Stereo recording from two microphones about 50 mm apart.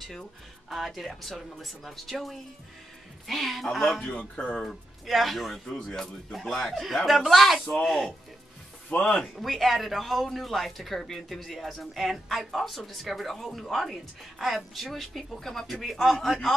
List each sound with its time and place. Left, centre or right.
0.7 s a man's voice: centre
4.2 s speech: left
4.6 s a man's voice: centre
5.8 s a man's voice: centre
8.9 s speech: left
9.4 s a man's voice: centre